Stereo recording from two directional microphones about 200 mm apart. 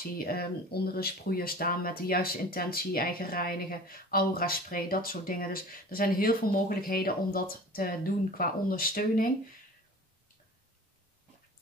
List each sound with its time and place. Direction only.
0.2 s speech: 50° left (ahead or behind)